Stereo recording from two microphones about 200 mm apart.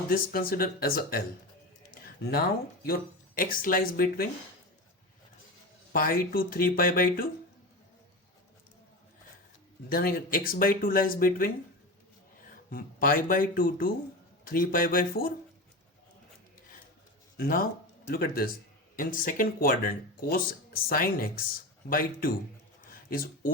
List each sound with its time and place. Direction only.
0.1 s speech: 45° left (ahead or behind)
5.9 s speech: 45° left (ahead or behind)
9.9 s speech: 50° left (ahead or behind)
12.7 s speech: 45° left (ahead or behind)
17.3 s speech: 50° left (ahead or behind)
22.8 s a sound: 45° left (ahead or behind)